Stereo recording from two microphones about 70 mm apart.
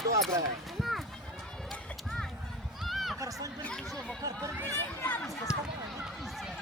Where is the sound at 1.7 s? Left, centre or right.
Centre.